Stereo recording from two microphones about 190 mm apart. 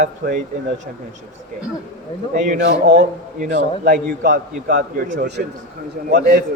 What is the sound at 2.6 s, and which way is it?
Speech, 65° right (ahead or behind).